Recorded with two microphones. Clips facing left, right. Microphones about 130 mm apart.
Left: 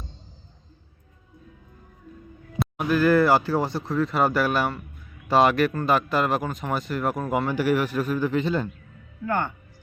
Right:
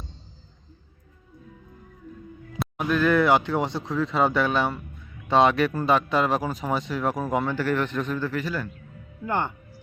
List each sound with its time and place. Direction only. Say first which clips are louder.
2.6 s speech: left 2 dB; 5° left (ahead or behind); by 8.7 s 25° left (ahead or behind)
9.2 s speech: left 1 dB; 20° right (ahead or behind)